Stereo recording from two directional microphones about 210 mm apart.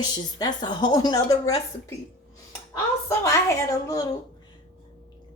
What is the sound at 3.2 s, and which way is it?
Speech, 15° left (ahead or behind).